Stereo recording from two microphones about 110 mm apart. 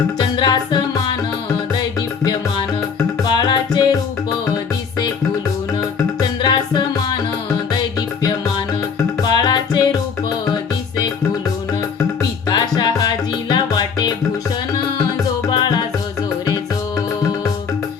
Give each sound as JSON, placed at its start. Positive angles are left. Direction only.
{"t": 0.3, "sound": "music", "side_deg": 40}
{"t": 3.3, "sound": "music", "side_deg": 40}
{"t": 6.1, "sound": "music", "side_deg": 40}
{"t": 9.2, "sound": "music", "side_deg": 40}
{"t": 12.5, "sound": "music", "side_deg": 40}
{"t": 15.4, "sound": "music", "side_deg": 45}